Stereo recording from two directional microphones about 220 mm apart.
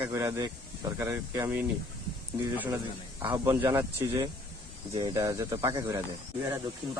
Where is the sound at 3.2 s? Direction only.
15° right (ahead or behind).